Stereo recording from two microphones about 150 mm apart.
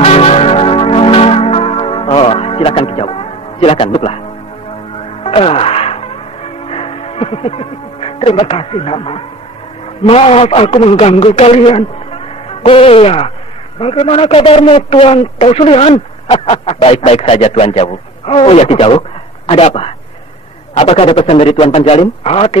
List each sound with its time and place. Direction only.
0.0 s music: 45° left (ahead or behind)
5.2 s music: 40° left (ahead or behind)
10.0 s a man's voice: 40° left (ahead or behind)